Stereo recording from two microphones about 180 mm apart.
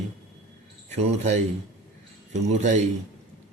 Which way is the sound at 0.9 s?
35° right (ahead or behind).